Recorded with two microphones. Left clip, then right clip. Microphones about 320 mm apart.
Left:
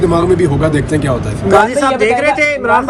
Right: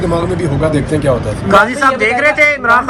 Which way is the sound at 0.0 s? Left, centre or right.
Centre.